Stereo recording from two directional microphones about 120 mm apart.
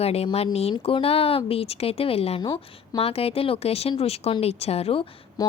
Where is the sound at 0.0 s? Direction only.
60° left (ahead or behind).